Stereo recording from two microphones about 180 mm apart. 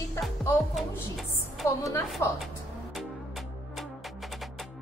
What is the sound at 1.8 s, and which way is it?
Music, 20° left (ahead or behind).